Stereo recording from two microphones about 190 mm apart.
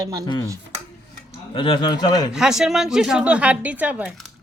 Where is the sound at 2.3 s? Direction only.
5° right (ahead or behind).